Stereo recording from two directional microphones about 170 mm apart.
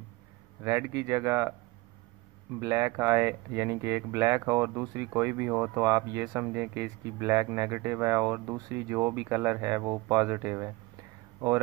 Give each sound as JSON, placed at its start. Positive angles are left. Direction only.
{"t": 0.7, "sound": "speech", "side_deg": -15}
{"t": 2.6, "sound": "speech", "side_deg": -20}